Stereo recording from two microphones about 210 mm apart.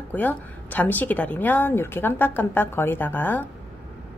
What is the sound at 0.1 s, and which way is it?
A woman's voice, 10° left (ahead or behind).